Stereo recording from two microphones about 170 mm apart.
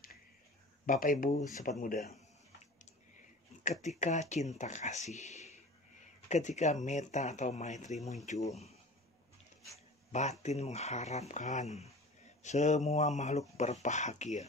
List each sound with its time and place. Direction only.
0.8 s speech: 50° left (ahead or behind)
4.0 s speech: 45° left (ahead or behind)
10.4 s speech: 40° left (ahead or behind)